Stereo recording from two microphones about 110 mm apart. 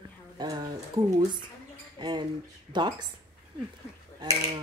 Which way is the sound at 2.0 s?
40° right (ahead or behind).